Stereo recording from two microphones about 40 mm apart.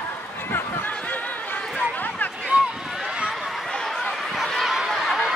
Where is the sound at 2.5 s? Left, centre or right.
Right.